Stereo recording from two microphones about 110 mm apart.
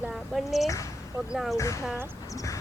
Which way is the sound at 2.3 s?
30° left (ahead or behind).